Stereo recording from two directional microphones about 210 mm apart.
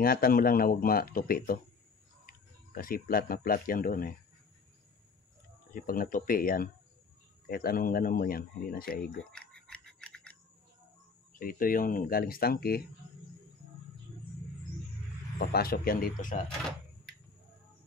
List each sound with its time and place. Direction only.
0.0 s speech: 45° left (ahead or behind)
5.8 s speech: 45° left (ahead or behind)
9.2 s a sound: 5° left (ahead or behind)
11.3 s speech: 40° left (ahead or behind)
15.3 s speech: 45° left (ahead or behind)